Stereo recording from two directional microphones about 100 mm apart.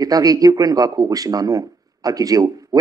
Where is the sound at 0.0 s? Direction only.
35° right (ahead or behind).